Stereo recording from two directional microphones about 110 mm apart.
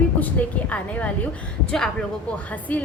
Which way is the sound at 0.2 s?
15° left (ahead or behind).